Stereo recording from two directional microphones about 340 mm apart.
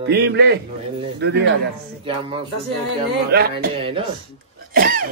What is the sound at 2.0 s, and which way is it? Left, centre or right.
Speech, centre.